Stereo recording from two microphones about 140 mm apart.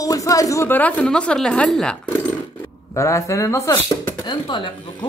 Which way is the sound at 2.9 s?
20° left (ahead or behind).